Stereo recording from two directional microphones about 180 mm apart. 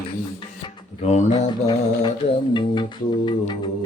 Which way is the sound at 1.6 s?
25° left (ahead or behind).